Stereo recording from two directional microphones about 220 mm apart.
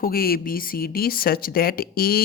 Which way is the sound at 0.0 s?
45° left (ahead or behind).